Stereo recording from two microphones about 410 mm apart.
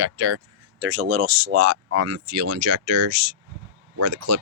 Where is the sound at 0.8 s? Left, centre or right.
Right.